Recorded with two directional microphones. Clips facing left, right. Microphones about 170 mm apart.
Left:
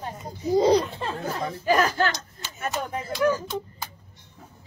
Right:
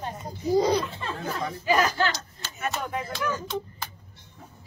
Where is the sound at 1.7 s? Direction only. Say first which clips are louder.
Left 2 dB; 50° left (ahead or behind).